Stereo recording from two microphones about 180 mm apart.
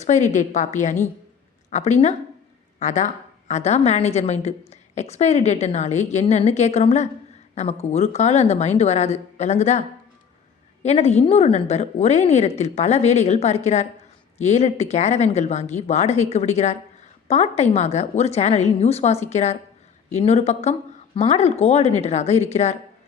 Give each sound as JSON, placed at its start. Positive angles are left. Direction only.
{"t": 0.0, "sound": "a woman's voice", "side_deg": 40}
{"t": 10.8, "sound": "a woman's voice", "side_deg": 35}